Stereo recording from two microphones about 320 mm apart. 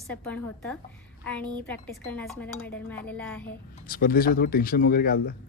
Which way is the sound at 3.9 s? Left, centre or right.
Left.